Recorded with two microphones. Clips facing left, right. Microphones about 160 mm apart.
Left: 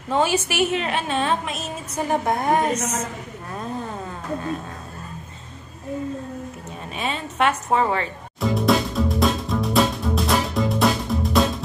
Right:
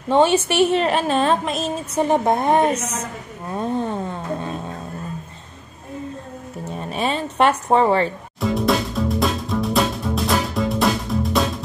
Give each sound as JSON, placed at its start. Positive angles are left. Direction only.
{"t": 0.1, "sound": "a woman's voice", "side_deg": -25}
{"t": 2.0, "sound": "a woman's voice", "side_deg": -25}
{"t": 7.0, "sound": "a woman's voice", "side_deg": -35}
{"t": 8.4, "sound": "music", "side_deg": 0}